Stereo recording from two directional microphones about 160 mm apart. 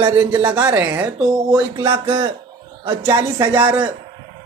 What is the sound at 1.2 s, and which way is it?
Speech, 20° right (ahead or behind).